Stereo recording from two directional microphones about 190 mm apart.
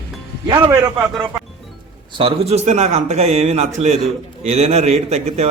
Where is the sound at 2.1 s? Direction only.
30° right (ahead or behind).